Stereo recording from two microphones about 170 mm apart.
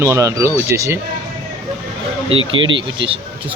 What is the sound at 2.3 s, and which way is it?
Speech, 30° right (ahead or behind).